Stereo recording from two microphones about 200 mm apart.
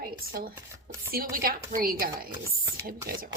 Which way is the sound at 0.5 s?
10° right (ahead or behind).